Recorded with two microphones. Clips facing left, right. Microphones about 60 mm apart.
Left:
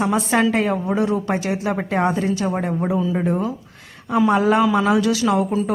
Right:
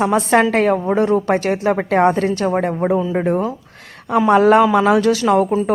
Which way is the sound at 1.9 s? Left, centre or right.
Right.